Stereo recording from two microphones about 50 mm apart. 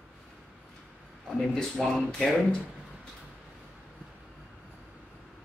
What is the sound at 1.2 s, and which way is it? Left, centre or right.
Speech, centre.